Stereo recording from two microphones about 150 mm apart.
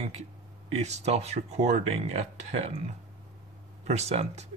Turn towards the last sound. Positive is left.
turn(degrees=-45)  # may be behind; listen again after turning